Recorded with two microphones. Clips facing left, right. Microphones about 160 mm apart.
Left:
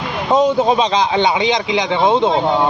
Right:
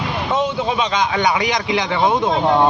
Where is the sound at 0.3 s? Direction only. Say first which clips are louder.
Left 7 dB; 40° left (ahead or behind); by 2.3 s 25° left (ahead or behind).